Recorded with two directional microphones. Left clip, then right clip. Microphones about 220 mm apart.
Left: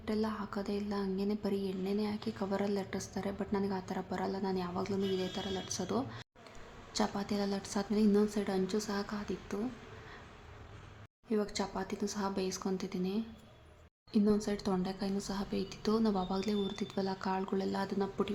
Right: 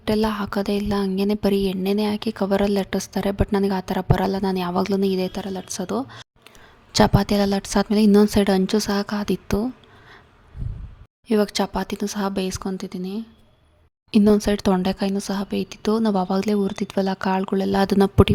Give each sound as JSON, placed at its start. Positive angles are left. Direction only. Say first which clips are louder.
{"t": 0.0, "sound": "a woman's voice", "louder": "right 14 dB", "side_deg": -45}
{"t": 11.3, "sound": "a woman's voice", "louder": "right 14 dB", "side_deg": -45}
{"t": 14.1, "sound": "speech", "louder": "right 14 dB", "side_deg": -45}